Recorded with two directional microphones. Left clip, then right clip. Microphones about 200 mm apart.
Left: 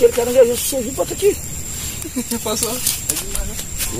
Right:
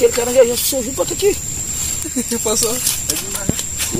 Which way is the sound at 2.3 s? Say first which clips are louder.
Right 4 dB; 30° right (ahead or behind).